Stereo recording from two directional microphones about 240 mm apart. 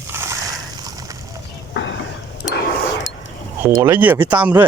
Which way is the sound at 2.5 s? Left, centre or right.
Left.